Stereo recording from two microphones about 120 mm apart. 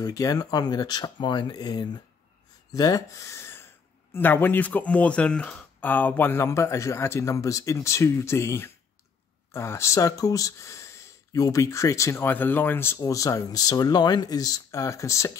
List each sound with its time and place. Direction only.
0.0 s speech: 30° left (ahead or behind)